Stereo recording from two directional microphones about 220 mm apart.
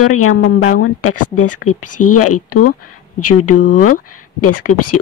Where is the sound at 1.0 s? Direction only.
85° left.